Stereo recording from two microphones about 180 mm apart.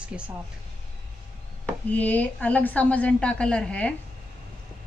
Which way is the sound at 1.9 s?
10° left (ahead or behind).